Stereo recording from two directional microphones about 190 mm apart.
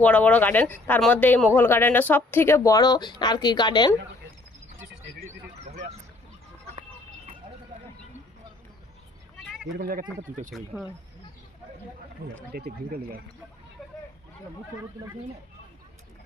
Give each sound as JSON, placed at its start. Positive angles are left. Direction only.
{"t": 0.0, "sound": "speech", "side_deg": 5}
{"t": 9.7, "sound": "speech", "side_deg": -50}
{"t": 10.7, "sound": "speech", "side_deg": 0}
{"t": 12.5, "sound": "speech", "side_deg": -50}